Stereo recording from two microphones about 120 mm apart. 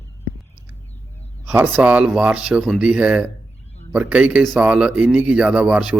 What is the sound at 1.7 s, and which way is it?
Speech, 10° right (ahead or behind).